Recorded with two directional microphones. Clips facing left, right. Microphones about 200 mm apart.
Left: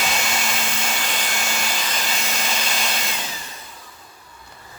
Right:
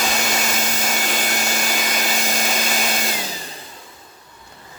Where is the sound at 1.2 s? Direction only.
45° right (ahead or behind).